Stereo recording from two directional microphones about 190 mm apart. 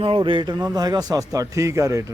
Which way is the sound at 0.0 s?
25° right (ahead or behind).